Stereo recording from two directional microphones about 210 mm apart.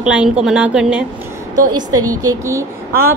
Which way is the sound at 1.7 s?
20° right (ahead or behind).